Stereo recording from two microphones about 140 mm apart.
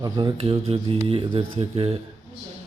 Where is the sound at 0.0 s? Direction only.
30° right (ahead or behind).